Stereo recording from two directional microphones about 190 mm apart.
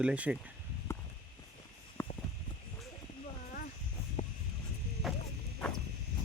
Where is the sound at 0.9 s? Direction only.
15° left (ahead or behind).